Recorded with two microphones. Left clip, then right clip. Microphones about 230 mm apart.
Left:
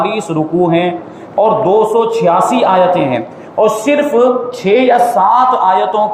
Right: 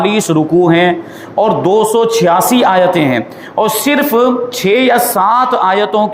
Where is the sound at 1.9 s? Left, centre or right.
Right.